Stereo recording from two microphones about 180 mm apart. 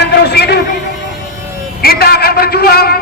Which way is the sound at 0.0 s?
65° left (ahead or behind).